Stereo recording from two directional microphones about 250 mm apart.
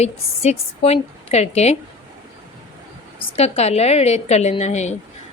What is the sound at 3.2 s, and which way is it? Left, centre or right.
A woman's voice, left.